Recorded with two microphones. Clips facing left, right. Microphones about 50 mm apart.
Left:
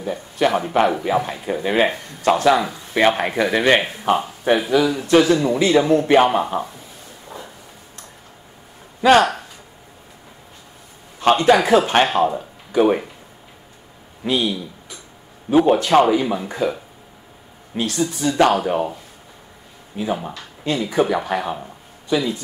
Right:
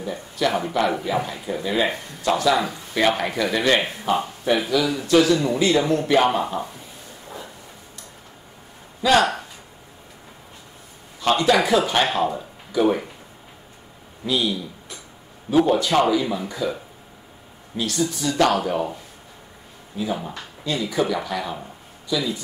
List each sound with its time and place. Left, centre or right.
0.4 s speech: left
5.7 s speech: centre
9.0 s speech: left
11.3 s speech: left
14.2 s speech: left
17.7 s speech: left
19.9 s speech: left